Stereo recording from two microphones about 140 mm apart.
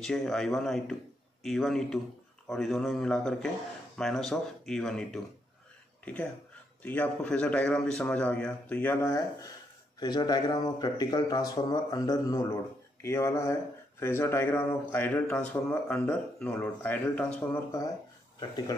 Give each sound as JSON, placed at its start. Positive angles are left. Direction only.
{"t": 0.0, "sound": "speech", "side_deg": 5}
{"t": 6.8, "sound": "a man's voice", "side_deg": 10}
{"t": 9.9, "sound": "a man's voice", "side_deg": 30}
{"t": 17.6, "sound": "speech", "side_deg": 25}